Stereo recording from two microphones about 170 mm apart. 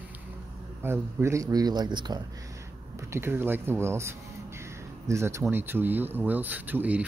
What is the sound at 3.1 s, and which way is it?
Speech, 15° right (ahead or behind).